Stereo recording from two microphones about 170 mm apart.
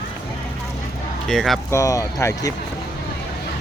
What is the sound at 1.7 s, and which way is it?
Speech, 20° left (ahead or behind).